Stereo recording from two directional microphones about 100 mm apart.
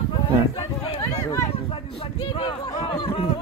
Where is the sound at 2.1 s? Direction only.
55° left (ahead or behind).